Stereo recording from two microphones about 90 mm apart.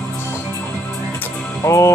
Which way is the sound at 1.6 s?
35° left (ahead or behind).